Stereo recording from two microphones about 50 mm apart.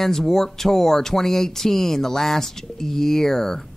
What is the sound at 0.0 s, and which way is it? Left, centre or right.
Speech, centre.